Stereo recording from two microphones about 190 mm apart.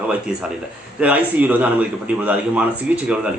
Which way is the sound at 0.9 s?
5° right (ahead or behind).